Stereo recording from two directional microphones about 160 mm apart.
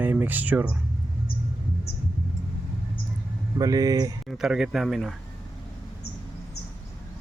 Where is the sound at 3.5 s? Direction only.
20° right (ahead or behind).